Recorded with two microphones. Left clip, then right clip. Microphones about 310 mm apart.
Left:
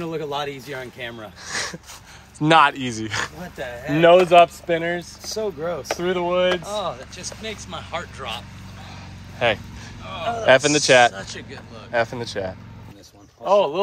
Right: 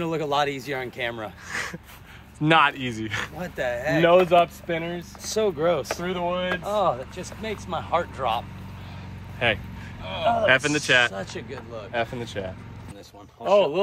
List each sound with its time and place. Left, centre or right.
0.0 s speech: centre
1.5 s dog: centre
2.3 s speech: centre
3.5 s speech: centre
3.9 s speech: left
5.3 s speech: right
5.9 s speech: left
6.8 s speech: centre
9.4 s speech: centre
11.1 s speech: centre
11.9 s speech: centre